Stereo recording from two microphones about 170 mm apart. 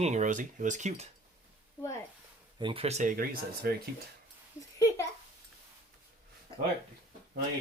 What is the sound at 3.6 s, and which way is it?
Speech, 65° right (ahead or behind).